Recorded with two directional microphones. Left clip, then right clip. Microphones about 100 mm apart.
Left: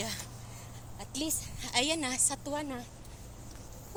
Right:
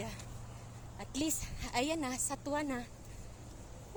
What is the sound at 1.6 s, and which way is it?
A woman's voice, 50° right (ahead or behind).